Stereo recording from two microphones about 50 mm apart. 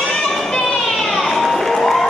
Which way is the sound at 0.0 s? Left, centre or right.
Centre.